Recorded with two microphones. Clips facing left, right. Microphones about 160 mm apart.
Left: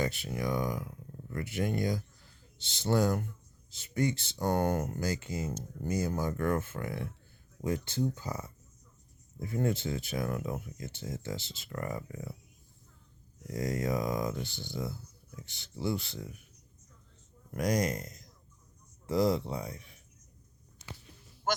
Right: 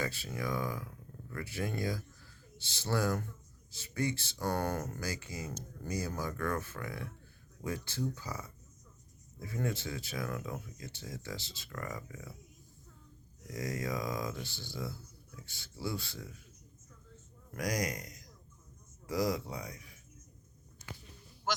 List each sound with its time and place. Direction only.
0.0 s speech: 20° left (ahead or behind)
13.5 s speech: 25° left (ahead or behind)
17.5 s speech: 25° left (ahead or behind)